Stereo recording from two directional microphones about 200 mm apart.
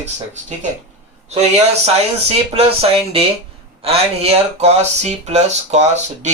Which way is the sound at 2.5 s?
30° right (ahead or behind).